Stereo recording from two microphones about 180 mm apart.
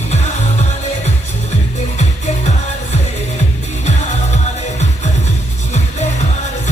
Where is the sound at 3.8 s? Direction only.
40° left (ahead or behind).